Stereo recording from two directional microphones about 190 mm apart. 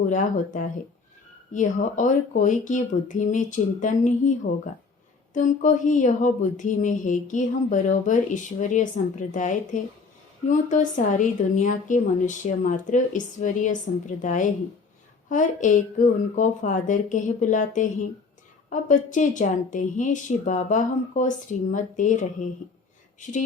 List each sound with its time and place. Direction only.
0.1 s speech: 40° left (ahead or behind)